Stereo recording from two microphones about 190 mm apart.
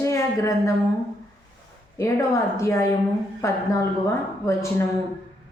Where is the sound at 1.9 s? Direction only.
15° left (ahead or behind).